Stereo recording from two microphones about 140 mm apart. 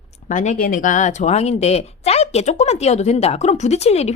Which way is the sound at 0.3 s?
65° left (ahead or behind).